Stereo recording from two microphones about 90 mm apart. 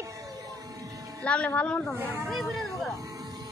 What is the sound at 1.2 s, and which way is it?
Speech, 10° left (ahead or behind).